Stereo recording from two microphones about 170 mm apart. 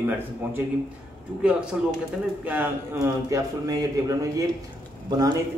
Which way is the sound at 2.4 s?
10° right (ahead or behind).